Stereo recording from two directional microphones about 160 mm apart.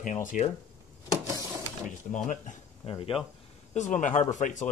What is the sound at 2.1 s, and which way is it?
Speech, 50° left (ahead or behind).